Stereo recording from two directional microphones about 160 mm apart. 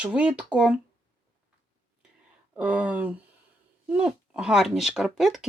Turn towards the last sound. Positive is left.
turn(degrees=0)  # may be behind; listen again after turning